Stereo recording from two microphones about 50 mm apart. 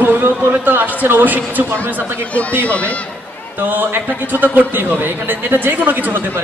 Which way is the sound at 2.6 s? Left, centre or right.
Left.